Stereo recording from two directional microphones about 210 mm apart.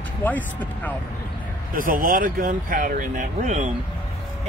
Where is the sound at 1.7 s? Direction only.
40° right (ahead or behind).